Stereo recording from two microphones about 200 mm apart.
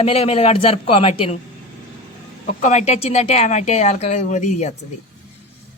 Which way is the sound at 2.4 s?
35° left (ahead or behind).